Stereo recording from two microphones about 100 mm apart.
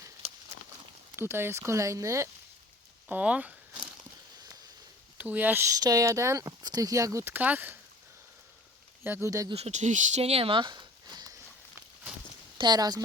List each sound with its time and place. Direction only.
1.1 s speech: 25° right (ahead or behind)
3.1 s speech: 15° right (ahead or behind)
5.1 s speech: 15° right (ahead or behind)
5.6 s speech: 35° right (ahead or behind); by 7.8 s 15° right (ahead or behind)
9.0 s speech: 20° right (ahead or behind)
9.7 s speech: 90° right
10.2 s a sound: 85° right; by 11.3 s 45° right (ahead or behind)
12.5 s speech: 45° right (ahead or behind)